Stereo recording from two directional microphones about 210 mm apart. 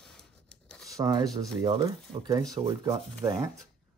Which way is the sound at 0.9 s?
15° right (ahead or behind).